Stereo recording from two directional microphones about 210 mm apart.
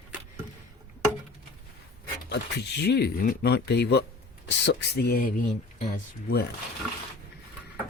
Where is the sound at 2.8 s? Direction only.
50° left (ahead or behind).